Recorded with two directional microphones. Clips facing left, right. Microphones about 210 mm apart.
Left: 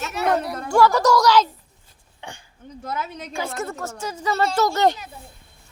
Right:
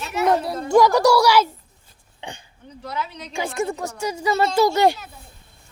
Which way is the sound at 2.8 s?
50° left (ahead or behind).